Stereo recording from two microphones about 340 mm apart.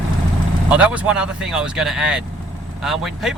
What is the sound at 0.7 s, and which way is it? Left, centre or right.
Speech, centre.